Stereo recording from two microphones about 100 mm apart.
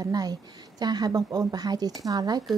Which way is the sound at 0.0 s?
40° right (ahead or behind).